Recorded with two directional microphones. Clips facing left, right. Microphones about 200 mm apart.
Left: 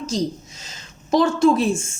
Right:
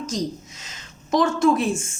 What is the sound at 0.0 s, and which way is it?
A woman's voice, 30° left (ahead or behind).